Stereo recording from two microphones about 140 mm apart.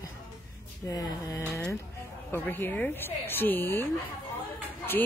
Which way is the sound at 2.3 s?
15° left (ahead or behind).